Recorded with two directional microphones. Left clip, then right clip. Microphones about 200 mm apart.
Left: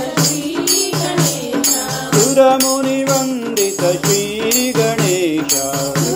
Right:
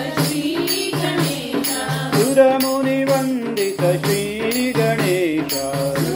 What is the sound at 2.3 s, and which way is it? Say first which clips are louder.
Music: left 2 dB; 35° left (ahead or behind).